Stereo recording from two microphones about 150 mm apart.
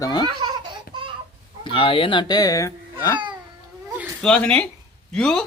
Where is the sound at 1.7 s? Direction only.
35° left (ahead or behind).